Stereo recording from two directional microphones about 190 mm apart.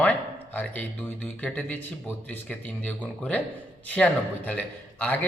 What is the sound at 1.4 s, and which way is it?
A man's voice, 10° left (ahead or behind).